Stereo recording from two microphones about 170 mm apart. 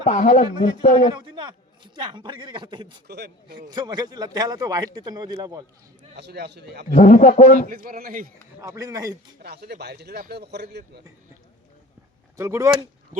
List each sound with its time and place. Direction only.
0.0 s a man's voice: 45° left (ahead or behind)
1.1 s a man's voice: 25° right (ahead or behind)
3.1 s speech: 70° right (ahead or behind)
3.7 s a man's voice: 25° right (ahead or behind)
6.1 s speech: 75° right (ahead or behind)
6.9 s a man's voice: 45° left (ahead or behind)
7.7 s a man's voice: 55° right (ahead or behind)
8.6 s a man's voice: 20° right (ahead or behind)
9.4 s speech: 70° right (ahead or behind)
12.4 s a man's voice: 20° right (ahead or behind)